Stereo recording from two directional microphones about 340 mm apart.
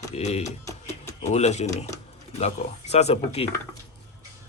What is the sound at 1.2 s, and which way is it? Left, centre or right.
Speech, centre.